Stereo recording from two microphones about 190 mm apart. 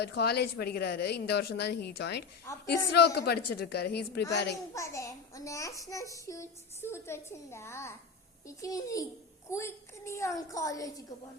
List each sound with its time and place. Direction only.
0.0 s a woman's voice: 60° left (ahead or behind)
4.7 s a child's voice: 15° left (ahead or behind)